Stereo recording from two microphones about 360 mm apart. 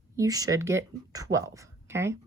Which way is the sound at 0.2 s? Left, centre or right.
Centre.